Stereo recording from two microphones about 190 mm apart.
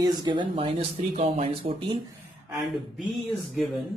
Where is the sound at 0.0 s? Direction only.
20° right (ahead or behind).